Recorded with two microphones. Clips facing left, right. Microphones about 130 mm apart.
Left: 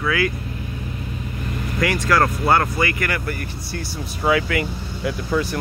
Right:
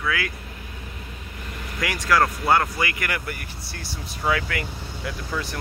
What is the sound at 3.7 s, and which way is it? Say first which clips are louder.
Speech: left 7 dB; 5° left (ahead or behind).